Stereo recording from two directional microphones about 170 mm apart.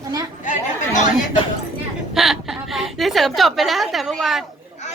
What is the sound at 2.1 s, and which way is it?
A woman's voice, centre (ahead or behind).